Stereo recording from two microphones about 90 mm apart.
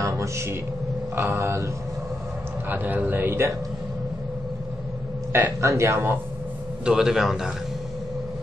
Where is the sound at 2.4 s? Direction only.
20° right (ahead or behind).